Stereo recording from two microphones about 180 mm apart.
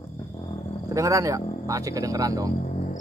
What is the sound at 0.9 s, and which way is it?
Speech, 15° right (ahead or behind).